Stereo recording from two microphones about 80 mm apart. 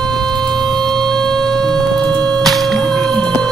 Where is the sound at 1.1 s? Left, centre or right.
Centre.